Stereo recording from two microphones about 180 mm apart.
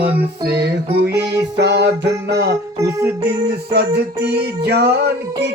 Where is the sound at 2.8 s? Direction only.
15° right (ahead or behind).